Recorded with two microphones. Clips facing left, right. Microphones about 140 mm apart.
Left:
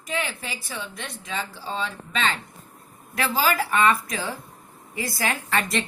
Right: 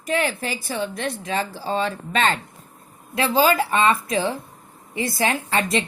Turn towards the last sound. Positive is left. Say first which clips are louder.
# right 3 dB
turn(degrees=-20)  # may be behind; listen again after turning